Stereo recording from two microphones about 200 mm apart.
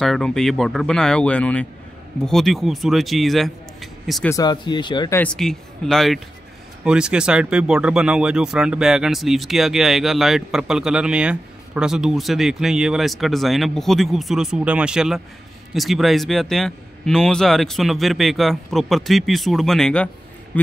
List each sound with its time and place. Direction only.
0.0 s speech: centre (ahead or behind)
4.3 s speech: 20° left (ahead or behind)
5.2 s speech: 5° left (ahead or behind)